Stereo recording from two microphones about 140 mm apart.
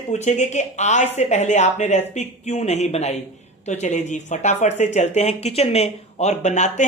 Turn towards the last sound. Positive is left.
turn(degrees=55)  # may be behind; listen again after turning